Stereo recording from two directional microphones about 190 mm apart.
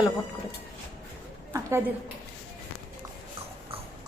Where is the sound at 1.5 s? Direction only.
15° right (ahead or behind).